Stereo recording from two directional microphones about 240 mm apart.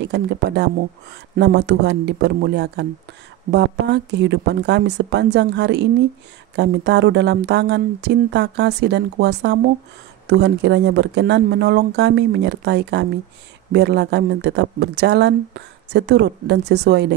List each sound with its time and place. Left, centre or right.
0.0 s speech: right